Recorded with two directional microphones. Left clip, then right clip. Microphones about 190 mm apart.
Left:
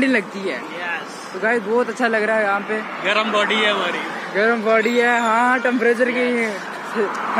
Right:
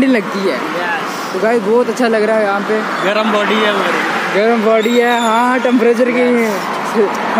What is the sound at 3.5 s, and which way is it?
Speech, 30° right (ahead or behind).